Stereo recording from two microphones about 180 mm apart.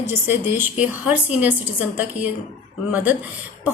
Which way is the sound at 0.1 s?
10° right (ahead or behind).